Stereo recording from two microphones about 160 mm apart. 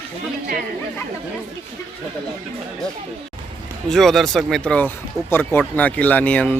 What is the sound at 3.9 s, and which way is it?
Speech, centre (ahead or behind).